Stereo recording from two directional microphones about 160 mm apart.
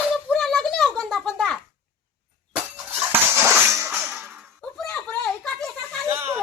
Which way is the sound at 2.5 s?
15° right (ahead or behind).